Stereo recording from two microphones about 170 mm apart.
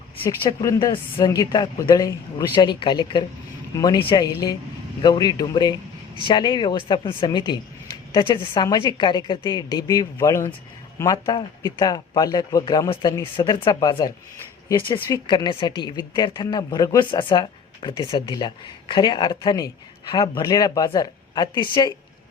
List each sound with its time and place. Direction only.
0.4 s a woman's voice: 20° left (ahead or behind)
14.9 s speech: 10° left (ahead or behind)
15.3 s a woman's voice: 25° left (ahead or behind)